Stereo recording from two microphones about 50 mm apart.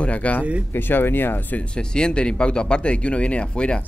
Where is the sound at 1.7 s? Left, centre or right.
Centre.